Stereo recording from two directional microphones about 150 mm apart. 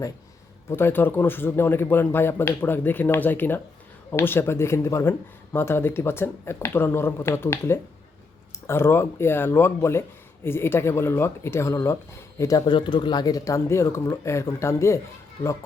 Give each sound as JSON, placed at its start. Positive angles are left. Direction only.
{"t": 0.7, "sound": "speech", "side_deg": 15}